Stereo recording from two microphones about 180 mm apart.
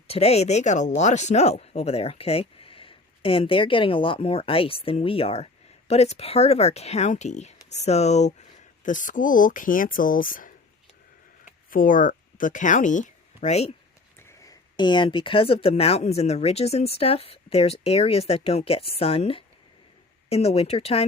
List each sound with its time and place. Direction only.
0.1 s speech: 35° left (ahead or behind)
14.2 s speech: 15° left (ahead or behind); by 21.1 s 35° left (ahead or behind)